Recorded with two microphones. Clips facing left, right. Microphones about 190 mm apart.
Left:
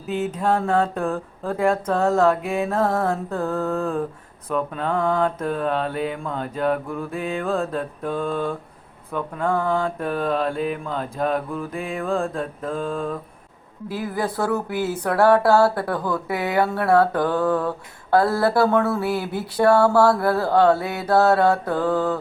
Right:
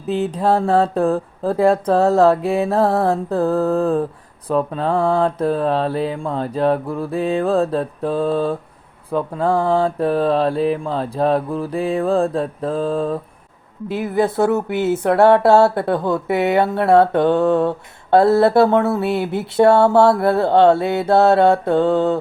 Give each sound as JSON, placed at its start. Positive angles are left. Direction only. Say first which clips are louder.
{"t": 0.1, "sound": "mantra", "louder": "right 4 dB", "side_deg": -35}
{"t": 13.8, "sound": "speech", "louder": "right 7 dB", "side_deg": -25}